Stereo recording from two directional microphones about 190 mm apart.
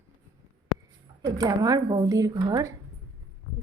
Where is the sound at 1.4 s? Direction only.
20° right (ahead or behind).